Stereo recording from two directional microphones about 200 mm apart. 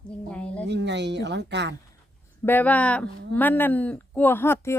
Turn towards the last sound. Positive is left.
turn(degrees=10)  # may be behind; listen again after turning